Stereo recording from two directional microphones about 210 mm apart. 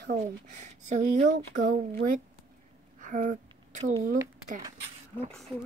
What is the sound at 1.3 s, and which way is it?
Speech, 60° right (ahead or behind).